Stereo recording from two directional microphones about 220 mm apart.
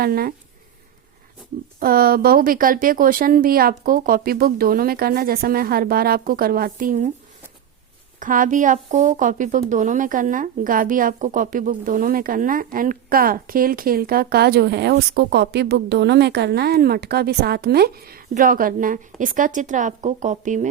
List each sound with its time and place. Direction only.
0.0 s speech: 40° right (ahead or behind)
1.8 s a woman's voice: 40° right (ahead or behind)
8.2 s a woman's voice: 35° right (ahead or behind)